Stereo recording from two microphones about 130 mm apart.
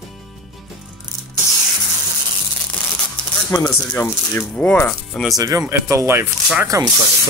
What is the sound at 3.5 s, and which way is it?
Speech, 25° left (ahead or behind).